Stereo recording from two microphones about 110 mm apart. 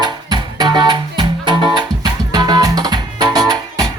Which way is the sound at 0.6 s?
40° right (ahead or behind).